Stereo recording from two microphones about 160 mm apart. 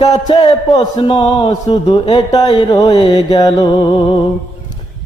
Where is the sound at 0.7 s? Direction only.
25° left (ahead or behind).